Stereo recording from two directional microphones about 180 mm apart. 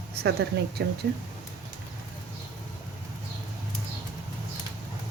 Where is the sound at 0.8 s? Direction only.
70° right (ahead or behind).